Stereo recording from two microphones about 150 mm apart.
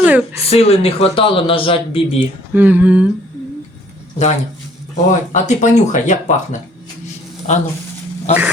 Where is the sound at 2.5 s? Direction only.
10° right (ahead or behind).